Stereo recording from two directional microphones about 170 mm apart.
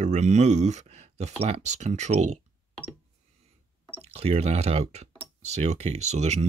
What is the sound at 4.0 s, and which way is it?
Speech, 40° right (ahead or behind).